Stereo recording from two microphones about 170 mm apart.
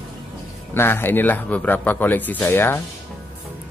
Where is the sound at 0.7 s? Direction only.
15° left (ahead or behind).